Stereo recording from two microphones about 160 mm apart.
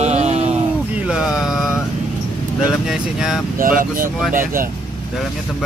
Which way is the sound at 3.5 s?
60° right (ahead or behind).